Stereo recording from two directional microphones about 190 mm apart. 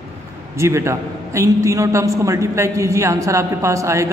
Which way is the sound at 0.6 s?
15° right (ahead or behind).